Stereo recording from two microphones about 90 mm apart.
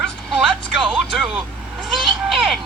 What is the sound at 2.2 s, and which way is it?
Music, centre (ahead or behind).